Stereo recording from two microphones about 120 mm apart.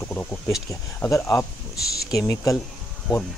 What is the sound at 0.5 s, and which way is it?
Speech, 25° left (ahead or behind).